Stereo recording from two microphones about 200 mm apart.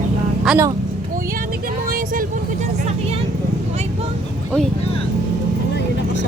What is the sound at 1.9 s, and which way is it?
Vehicle, 45° right (ahead or behind).